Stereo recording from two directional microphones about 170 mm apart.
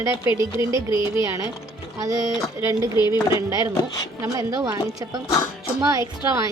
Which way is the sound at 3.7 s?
20° left (ahead or behind).